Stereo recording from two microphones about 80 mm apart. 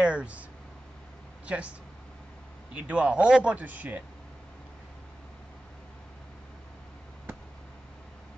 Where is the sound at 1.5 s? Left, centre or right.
Centre.